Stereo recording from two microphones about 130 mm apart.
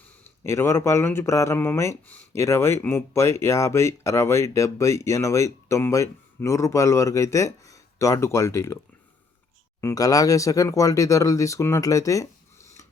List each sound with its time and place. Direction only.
0.4 s speech: 20° left (ahead or behind)
9.8 s speech: 25° left (ahead or behind)